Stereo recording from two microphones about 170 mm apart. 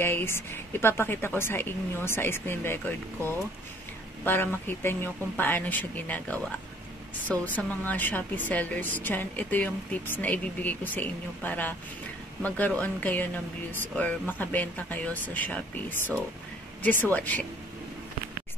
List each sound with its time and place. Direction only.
0.0 s a woman's voice: 15° left (ahead or behind)
4.2 s a woman's voice: 10° left (ahead or behind)